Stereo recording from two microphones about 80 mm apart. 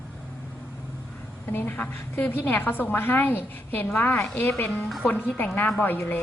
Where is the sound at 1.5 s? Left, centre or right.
Left.